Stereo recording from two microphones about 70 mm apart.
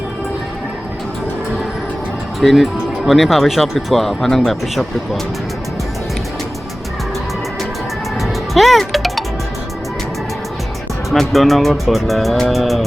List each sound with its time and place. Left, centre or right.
2.4 s speech: centre
8.2 s music: centre
11.1 s speech: centre